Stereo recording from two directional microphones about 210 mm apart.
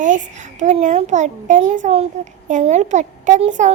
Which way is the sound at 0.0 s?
35° right (ahead or behind).